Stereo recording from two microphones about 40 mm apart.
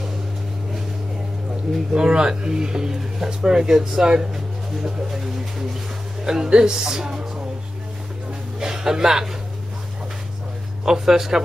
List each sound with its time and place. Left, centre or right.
1.9 s speech: centre
8.5 s a sound: centre
10.9 s speech: centre